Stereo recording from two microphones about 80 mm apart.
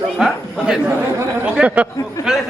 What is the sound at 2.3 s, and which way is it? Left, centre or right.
Speech, centre.